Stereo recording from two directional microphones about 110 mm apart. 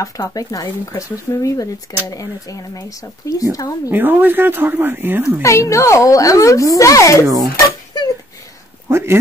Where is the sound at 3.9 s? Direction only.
15° right (ahead or behind).